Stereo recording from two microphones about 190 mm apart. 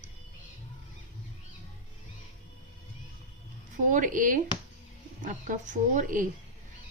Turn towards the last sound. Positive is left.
turn(degrees=-45)  # may be behind; listen again after turning